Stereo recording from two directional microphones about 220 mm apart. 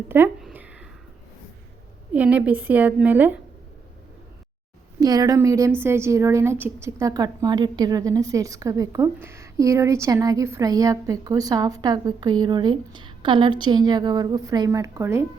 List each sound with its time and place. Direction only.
0.1 s a sound: 5° right (ahead or behind)
2.1 s a woman's voice: 5° right (ahead or behind)
4.9 s a woman's voice: 15° right (ahead or behind)